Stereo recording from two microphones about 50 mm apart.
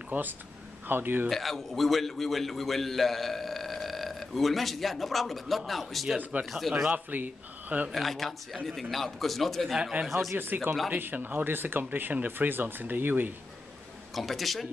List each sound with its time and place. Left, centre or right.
0.1 s speech: right
1.3 s a man's voice: centre
6.3 s speech: right
7.9 s a man's voice: centre
10.3 s speech: right
14.1 s a man's voice: centre